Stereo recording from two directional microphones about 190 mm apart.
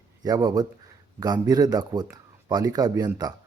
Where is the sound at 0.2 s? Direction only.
20° right (ahead or behind).